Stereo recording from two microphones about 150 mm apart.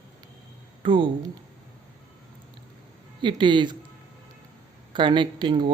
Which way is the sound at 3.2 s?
30° right (ahead or behind).